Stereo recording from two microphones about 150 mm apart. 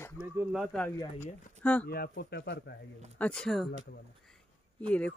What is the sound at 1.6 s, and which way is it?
Speech, 10° left (ahead or behind).